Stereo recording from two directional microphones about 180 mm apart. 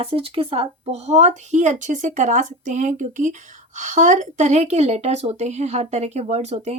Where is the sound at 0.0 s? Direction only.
30° right (ahead or behind).